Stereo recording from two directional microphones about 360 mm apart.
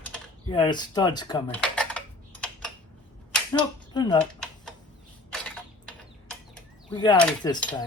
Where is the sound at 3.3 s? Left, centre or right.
Centre.